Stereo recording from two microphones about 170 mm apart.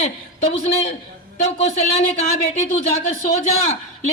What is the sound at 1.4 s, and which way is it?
Speech, 40° left (ahead or behind).